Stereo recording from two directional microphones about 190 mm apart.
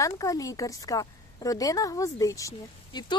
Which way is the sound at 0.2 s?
20° left (ahead or behind).